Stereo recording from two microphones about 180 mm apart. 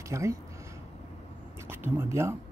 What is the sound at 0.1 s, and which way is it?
Speech, 15° right (ahead or behind).